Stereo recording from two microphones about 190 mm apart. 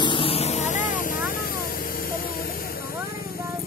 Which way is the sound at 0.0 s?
25° left (ahead or behind).